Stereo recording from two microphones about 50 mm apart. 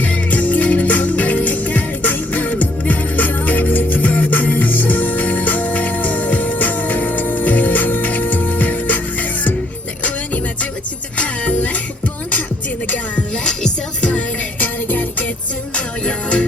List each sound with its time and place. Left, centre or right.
0.0 s music: left
10.0 s music: left
13.1 s music: centre
14.6 s music: left
15.7 s music: left